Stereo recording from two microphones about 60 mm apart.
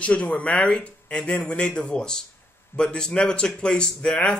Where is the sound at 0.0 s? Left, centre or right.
Centre.